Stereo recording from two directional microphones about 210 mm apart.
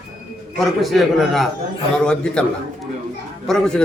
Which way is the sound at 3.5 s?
Centre (ahead or behind).